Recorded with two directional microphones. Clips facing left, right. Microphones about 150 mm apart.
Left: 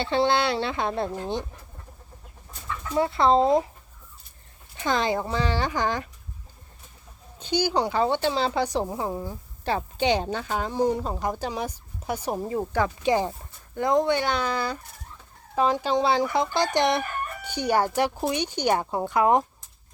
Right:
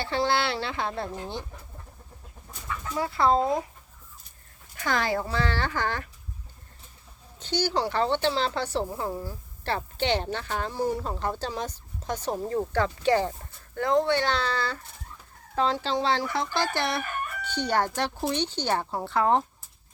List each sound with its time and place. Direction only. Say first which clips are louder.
0.0 s speech: left 4 dB; 20° left (ahead or behind)
2.9 s speech: left 3 dB; 25° left (ahead or behind)
4.8 s a woman's voice: left 2 dB; 20° left (ahead or behind)
7.3 s a woman's voice: left 3 dB; 10° left (ahead or behind)